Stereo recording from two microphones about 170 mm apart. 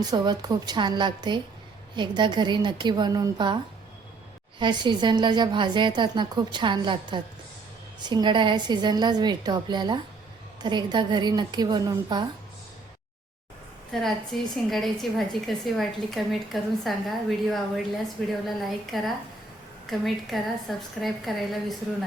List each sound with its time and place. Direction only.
0.0 s a woman's voice: 25° right (ahead or behind)
4.6 s a woman's voice: 25° right (ahead or behind)
13.9 s a woman's voice: centre (ahead or behind)